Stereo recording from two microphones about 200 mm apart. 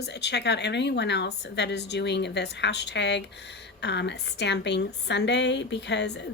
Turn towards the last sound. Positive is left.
turn(degrees=60)  # may be behind; listen again after turning